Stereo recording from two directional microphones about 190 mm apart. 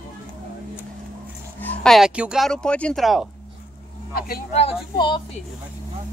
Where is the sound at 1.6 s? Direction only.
5° left (ahead or behind).